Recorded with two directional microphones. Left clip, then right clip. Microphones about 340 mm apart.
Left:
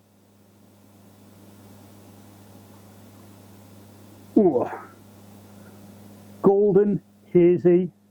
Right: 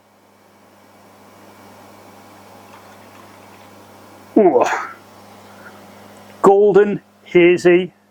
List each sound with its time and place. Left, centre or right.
4.4 s speech: centre
6.5 s a man's voice: right
6.7 s speech: centre